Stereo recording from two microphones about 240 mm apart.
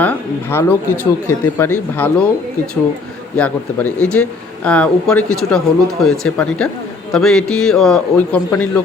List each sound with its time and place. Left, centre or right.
0.0 s speech: centre
3.3 s speech: centre